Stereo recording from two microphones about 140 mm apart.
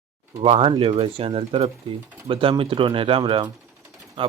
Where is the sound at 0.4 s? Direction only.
40° right (ahead or behind).